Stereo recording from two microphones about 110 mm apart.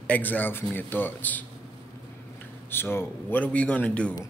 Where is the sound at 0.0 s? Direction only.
15° left (ahead or behind).